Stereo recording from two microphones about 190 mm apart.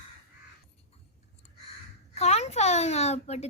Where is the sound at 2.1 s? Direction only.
35° left (ahead or behind).